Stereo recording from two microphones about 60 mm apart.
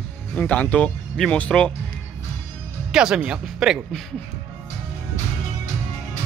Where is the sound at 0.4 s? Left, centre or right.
Left.